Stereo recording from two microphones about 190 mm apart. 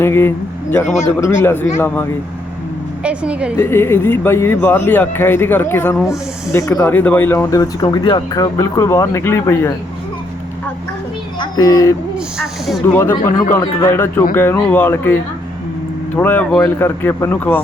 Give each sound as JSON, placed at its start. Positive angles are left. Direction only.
{"t": 0.0, "sound": "speech", "side_deg": 15}
{"t": 3.0, "sound": "a woman's voice", "side_deg": -5}
{"t": 3.6, "sound": "speech", "side_deg": 10}
{"t": 11.3, "sound": "speech", "side_deg": 20}
{"t": 12.1, "sound": "speech", "side_deg": 0}
{"t": 13.5, "sound": "speech", "side_deg": 20}